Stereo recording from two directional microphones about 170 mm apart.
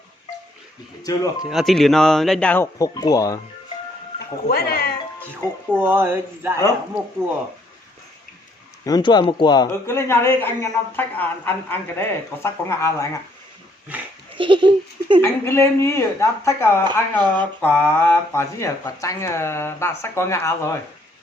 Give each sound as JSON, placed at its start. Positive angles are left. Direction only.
{"t": 1.0, "sound": "speech", "side_deg": 20}
{"t": 1.5, "sound": "speech", "side_deg": 0}
{"t": 2.7, "sound": "speech", "side_deg": 20}
{"t": 4.4, "sound": "speech", "side_deg": 60}
{"t": 5.3, "sound": "speech", "side_deg": -15}
{"t": 8.8, "sound": "speech", "side_deg": 25}
{"t": 14.3, "sound": "laughter", "side_deg": -30}
{"t": 15.2, "sound": "speech", "side_deg": 15}